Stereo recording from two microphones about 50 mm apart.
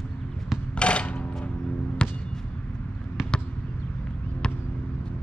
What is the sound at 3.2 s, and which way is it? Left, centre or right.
Basketball bounce, centre.